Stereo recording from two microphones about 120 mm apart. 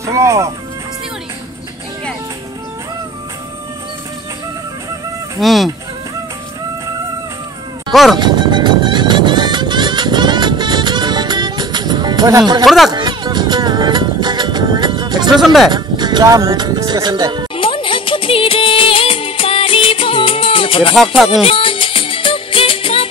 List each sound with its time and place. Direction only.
0.0 s speech: 25° right (ahead or behind)
5.4 s speech: centre (ahead or behind)
7.9 s speech: centre (ahead or behind)
8.2 s music: 40° right (ahead or behind)
12.6 s speech: centre (ahead or behind)
12.9 s music: 35° right (ahead or behind)
15.4 s speech: centre (ahead or behind)
15.7 s speech: 35° right (ahead or behind)
17.6 s music of bollywood: 45° left (ahead or behind)
21.3 s music: 50° left (ahead or behind)